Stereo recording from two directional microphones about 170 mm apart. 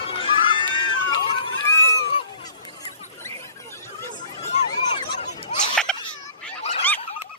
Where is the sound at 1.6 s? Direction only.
15° left (ahead or behind).